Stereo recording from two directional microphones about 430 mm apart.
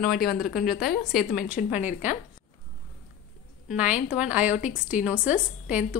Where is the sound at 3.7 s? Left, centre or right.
Centre.